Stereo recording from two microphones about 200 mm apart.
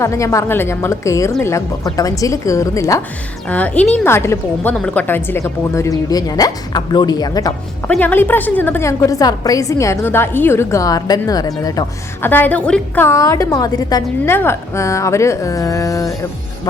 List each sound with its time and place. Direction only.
0.0 s a woman's voice: 15° left (ahead or behind)
7.9 s a woman's voice: 10° left (ahead or behind)